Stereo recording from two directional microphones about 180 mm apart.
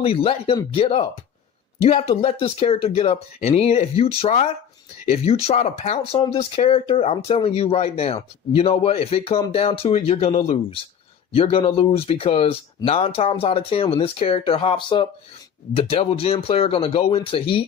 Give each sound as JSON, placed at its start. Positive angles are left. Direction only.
{"t": 0.0, "sound": "speech", "side_deg": 30}